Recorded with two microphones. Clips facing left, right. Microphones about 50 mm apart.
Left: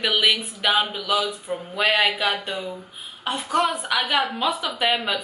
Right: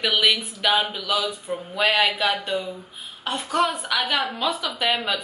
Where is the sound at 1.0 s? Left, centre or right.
Centre.